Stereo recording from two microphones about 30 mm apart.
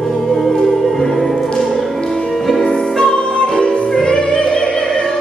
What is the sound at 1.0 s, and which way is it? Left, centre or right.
Music, centre.